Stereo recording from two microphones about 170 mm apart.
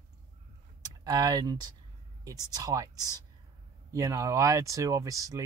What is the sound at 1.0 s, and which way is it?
Speech, 25° right (ahead or behind).